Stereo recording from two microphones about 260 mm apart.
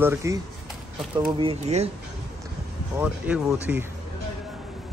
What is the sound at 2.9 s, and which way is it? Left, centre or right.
Speech, centre.